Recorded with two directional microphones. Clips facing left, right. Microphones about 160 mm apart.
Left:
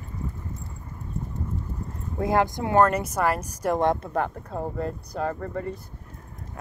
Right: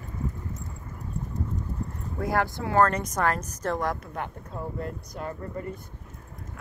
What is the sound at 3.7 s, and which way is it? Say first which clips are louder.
Speech: left 9 dB; 25° left (ahead or behind).